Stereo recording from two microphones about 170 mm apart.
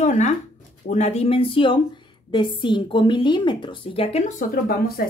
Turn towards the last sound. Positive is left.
turn(degrees=60)  # may be behind; listen again after turning